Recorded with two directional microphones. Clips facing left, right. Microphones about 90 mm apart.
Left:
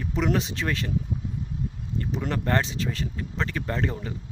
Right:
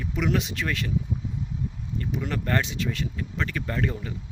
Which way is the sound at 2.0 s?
35° left (ahead or behind).